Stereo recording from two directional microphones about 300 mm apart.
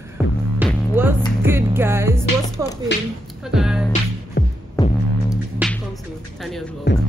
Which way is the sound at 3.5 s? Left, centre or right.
Centre.